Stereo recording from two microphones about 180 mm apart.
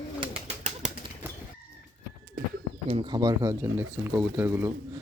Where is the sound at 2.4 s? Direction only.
50° right (ahead or behind).